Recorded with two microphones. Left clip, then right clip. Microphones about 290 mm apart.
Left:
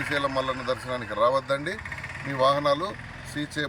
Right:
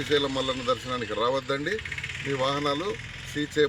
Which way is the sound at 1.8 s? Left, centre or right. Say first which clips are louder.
Right 2 dB; left.